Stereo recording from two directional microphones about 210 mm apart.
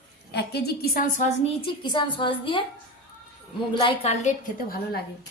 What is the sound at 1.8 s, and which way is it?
Speech, 25° left (ahead or behind).